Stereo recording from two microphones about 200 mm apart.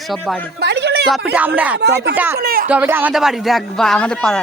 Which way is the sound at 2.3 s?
45° right (ahead or behind).